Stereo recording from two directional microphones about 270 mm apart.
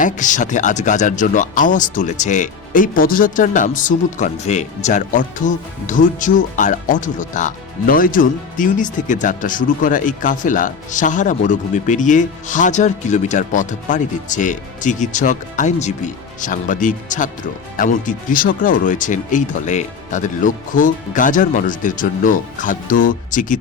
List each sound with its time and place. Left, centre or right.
0.0 s speech: left